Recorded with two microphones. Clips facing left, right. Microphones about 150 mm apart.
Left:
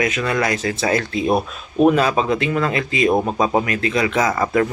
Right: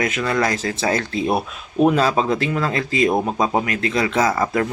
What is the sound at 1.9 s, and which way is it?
Speech, 30° right (ahead or behind).